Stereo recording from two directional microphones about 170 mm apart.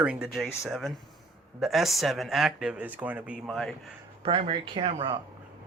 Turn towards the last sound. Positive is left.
turn(degrees=-30)  # may be behind; listen again after turning